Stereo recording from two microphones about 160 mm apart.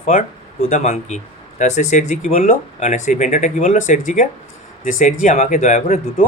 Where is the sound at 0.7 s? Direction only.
45° left (ahead or behind).